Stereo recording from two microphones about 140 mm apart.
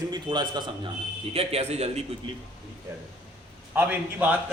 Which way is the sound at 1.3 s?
45° right (ahead or behind).